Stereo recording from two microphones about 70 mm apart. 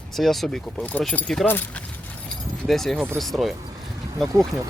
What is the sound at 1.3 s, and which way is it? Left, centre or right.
Speech, centre.